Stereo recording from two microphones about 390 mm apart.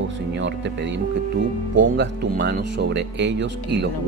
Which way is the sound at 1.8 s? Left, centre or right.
Right.